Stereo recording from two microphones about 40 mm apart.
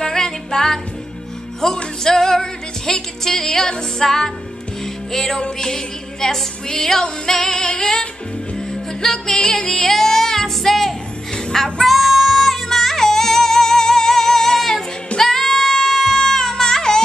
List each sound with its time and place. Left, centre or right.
0.0 s music: centre